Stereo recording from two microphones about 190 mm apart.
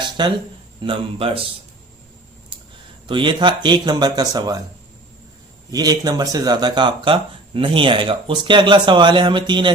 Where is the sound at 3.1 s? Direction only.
25° right (ahead or behind).